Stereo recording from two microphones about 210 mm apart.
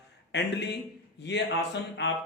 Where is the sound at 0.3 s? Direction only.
55° left (ahead or behind).